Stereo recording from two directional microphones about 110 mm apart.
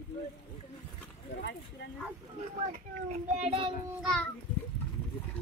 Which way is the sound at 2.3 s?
75° right (ahead or behind).